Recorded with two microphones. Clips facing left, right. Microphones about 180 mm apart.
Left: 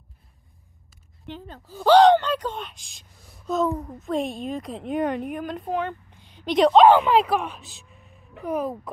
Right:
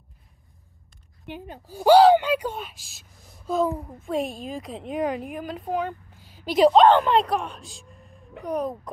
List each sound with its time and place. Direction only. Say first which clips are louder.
1.2 s a woman's voice: right 1 dB; 15° right (ahead or behind); by 8.9 s 5° left (ahead or behind)